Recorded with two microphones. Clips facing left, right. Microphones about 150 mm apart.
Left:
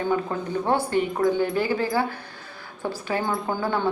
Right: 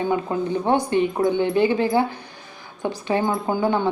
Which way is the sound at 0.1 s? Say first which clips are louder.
Right 3 dB; 15° right (ahead or behind).